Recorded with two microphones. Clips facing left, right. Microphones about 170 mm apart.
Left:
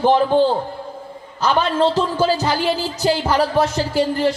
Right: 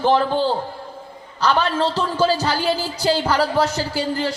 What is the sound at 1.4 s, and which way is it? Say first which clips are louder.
Speech: left 2 dB; 20° left (ahead or behind).